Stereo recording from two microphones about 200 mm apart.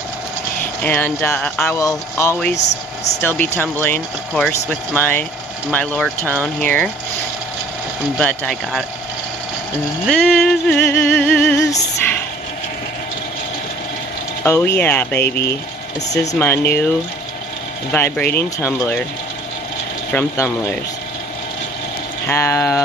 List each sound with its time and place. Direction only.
0.8 s speech: 10° left (ahead or behind)
8.2 s a sound: 5° left (ahead or behind)
10.0 s a sound: centre (ahead or behind)
10.8 s speech: 10° left (ahead or behind)
11.1 s music: 5° left (ahead or behind)
14.4 s speech: 10° left (ahead or behind)
17.9 s speech: 10° left (ahead or behind)
20.1 s speech: 10° left (ahead or behind)
22.3 s speech: 10° left (ahead or behind)